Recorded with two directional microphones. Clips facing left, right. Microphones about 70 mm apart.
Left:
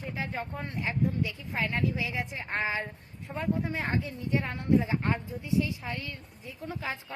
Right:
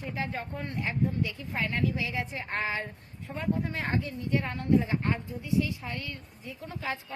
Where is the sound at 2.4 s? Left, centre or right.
Centre.